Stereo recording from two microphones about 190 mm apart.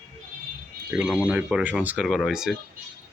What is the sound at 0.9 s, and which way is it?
Speech, 5° right (ahead or behind).